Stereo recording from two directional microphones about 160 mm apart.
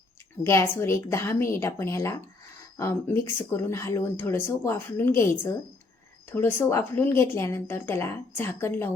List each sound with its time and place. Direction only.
0.4 s speech: 15° left (ahead or behind)